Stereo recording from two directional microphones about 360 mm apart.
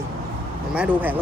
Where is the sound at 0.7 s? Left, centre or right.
Centre.